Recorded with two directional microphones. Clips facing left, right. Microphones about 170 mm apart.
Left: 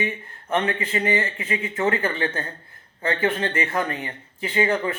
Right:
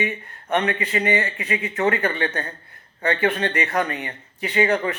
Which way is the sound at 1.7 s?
25° left (ahead or behind).